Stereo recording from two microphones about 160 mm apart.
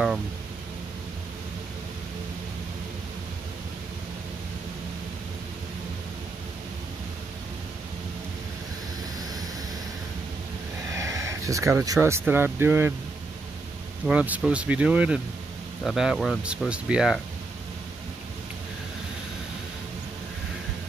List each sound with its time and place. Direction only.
10.9 s speech: 20° right (ahead or behind)
14.0 s speech: 10° right (ahead or behind)